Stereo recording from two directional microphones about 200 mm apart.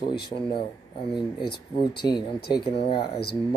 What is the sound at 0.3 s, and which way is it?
Speech, 30° left (ahead or behind).